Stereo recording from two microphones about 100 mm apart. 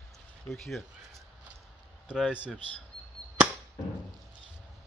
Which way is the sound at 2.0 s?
5° right (ahead or behind).